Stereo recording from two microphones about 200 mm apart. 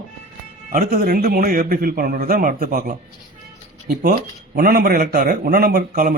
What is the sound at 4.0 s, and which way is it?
Speech, 45° right (ahead or behind).